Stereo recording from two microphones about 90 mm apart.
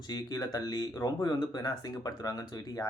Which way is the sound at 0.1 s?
50° left (ahead or behind).